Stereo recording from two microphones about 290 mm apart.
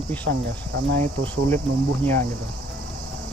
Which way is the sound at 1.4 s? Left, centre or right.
Centre.